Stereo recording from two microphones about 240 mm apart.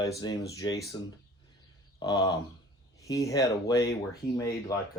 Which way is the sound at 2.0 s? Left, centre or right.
Centre.